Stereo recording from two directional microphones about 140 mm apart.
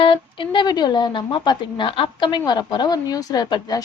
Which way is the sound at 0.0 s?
40° left (ahead or behind).